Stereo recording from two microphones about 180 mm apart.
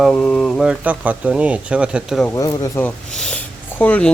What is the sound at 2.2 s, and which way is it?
Speech, 20° left (ahead or behind).